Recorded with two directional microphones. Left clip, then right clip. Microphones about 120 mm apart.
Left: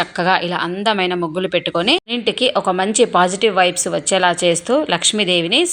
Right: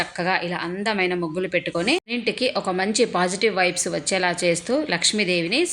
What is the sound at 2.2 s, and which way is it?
A woman's voice, 20° left (ahead or behind).